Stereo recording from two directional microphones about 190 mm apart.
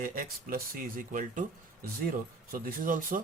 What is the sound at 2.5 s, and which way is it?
Speech, 45° right (ahead or behind).